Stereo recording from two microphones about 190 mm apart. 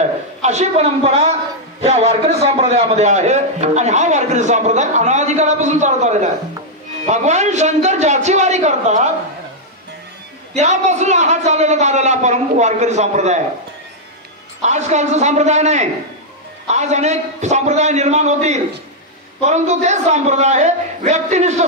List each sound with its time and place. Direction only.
0.4 s a man's voice: 35° right (ahead or behind)
10.5 s a man's voice: 35° right (ahead or behind)
14.6 s a man's voice: 35° right (ahead or behind)